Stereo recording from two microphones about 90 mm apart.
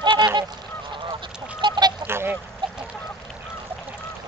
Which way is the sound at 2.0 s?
25° right (ahead or behind).